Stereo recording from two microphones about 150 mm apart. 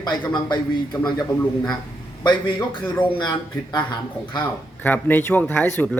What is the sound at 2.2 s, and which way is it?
A man's voice, 30° left (ahead or behind).